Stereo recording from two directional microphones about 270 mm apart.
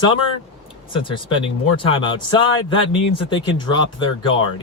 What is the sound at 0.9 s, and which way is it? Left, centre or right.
Speech, centre.